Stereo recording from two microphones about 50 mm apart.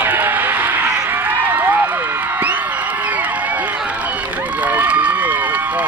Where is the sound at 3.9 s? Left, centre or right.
Right.